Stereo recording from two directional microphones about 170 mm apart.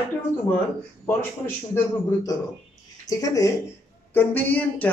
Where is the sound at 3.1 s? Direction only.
20° left (ahead or behind).